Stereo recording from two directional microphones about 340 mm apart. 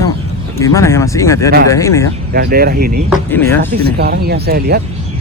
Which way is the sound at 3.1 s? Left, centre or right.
Centre.